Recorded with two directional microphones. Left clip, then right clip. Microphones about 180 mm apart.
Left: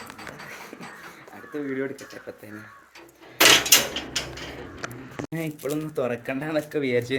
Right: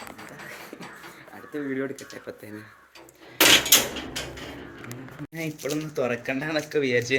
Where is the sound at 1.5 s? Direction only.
15° right (ahead or behind).